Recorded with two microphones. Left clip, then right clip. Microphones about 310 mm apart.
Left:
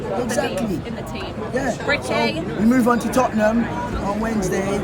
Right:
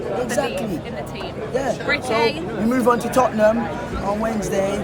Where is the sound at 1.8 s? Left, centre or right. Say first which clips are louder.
Right 1 dB; centre.